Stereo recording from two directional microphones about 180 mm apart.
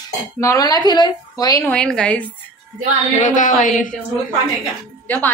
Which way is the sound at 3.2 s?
45° left (ahead or behind).